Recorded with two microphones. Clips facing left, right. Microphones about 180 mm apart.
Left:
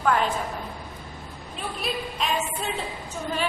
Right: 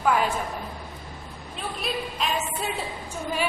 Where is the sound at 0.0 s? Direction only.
5° right (ahead or behind).